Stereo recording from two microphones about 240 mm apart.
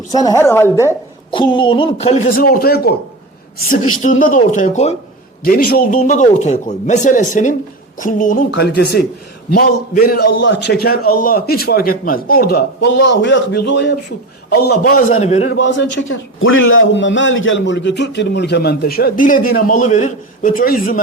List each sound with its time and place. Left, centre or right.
0.1 s a woman's voice: centre; by 2.9 s left
4.0 s a man's voice: left
10.3 s a man's voice: left
14.8 s a man's voice: left
16.0 s a man's voice: left